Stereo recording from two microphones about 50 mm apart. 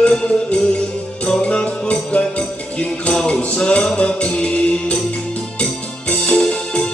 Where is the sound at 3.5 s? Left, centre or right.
Left.